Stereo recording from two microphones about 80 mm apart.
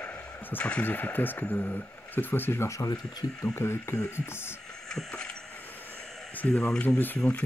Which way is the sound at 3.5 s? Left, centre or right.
Left.